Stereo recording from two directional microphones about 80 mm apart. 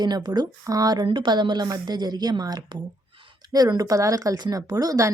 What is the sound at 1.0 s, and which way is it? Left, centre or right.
A woman's voice, right.